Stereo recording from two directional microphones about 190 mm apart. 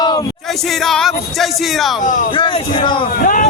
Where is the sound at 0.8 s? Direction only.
Centre (ahead or behind).